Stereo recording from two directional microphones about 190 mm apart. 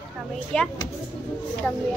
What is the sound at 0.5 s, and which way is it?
Speech, 5° left (ahead or behind).